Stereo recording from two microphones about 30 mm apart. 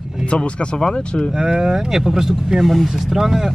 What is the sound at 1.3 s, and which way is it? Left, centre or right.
Speech, right.